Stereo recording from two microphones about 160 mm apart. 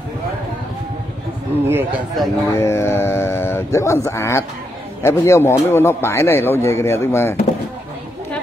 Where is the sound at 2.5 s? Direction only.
15° left (ahead or behind).